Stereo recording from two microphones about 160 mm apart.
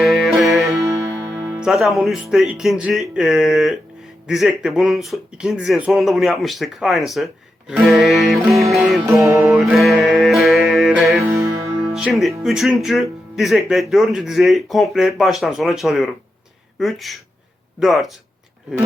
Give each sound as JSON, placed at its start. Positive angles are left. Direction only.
{"t": 0.0, "sound": "music", "side_deg": 0}
{"t": 0.6, "sound": "music", "side_deg": -20}
{"t": 1.5, "sound": "speech", "side_deg": -5}
{"t": 9.0, "sound": "music", "side_deg": -15}
{"t": 9.6, "sound": "music", "side_deg": 0}
{"t": 11.0, "sound": "music", "side_deg": -15}
{"t": 11.9, "sound": "speech", "side_deg": -5}